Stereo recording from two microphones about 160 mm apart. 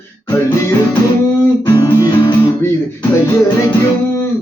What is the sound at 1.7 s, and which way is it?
Music, 25° left (ahead or behind).